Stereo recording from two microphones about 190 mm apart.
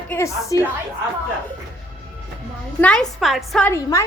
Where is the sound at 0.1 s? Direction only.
15° left (ahead or behind).